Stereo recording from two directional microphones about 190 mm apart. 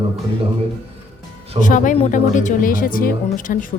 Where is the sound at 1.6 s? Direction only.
45° left (ahead or behind).